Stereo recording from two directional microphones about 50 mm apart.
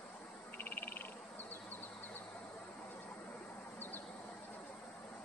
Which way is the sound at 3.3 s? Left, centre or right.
Left.